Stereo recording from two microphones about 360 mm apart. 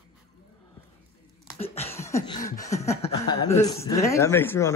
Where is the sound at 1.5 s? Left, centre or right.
Centre.